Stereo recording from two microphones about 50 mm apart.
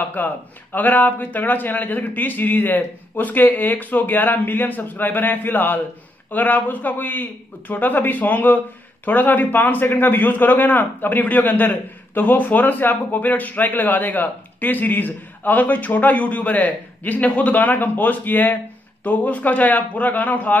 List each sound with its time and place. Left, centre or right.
0.1 s a man's voice: left